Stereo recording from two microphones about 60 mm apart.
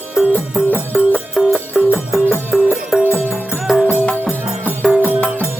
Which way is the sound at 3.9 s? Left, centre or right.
Left.